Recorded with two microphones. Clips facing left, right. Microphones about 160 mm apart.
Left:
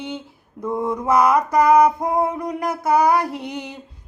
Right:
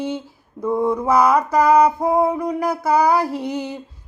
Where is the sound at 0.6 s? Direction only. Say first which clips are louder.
Right 4 dB; 5° right (ahead or behind).